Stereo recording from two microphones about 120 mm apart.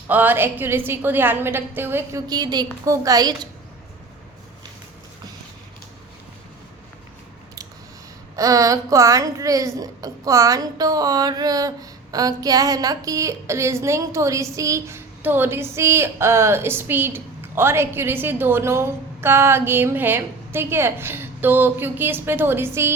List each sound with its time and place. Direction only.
0.1 s a woman's voice: 15° right (ahead or behind)
2.2 s a woman's voice: 35° right (ahead or behind)
8.4 s a woman's voice: 30° right (ahead or behind)